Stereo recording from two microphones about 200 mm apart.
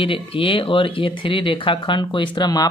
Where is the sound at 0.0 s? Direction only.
25° left (ahead or behind).